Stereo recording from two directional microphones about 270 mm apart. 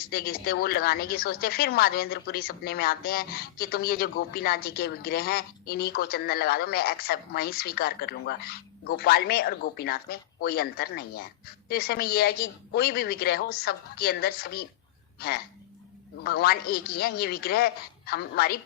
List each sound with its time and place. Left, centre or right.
0.0 s a woman's voice: left
16.2 s a woman's voice: left